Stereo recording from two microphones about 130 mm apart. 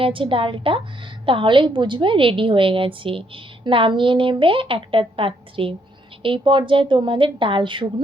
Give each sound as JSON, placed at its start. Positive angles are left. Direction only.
{"t": 0.0, "sound": "a woman's voice", "side_deg": -40}